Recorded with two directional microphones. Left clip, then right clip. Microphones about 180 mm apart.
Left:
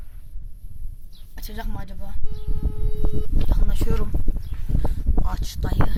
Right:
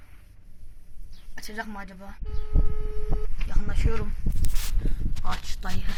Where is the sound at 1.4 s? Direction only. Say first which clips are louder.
Right 2 dB; 5° left (ahead or behind).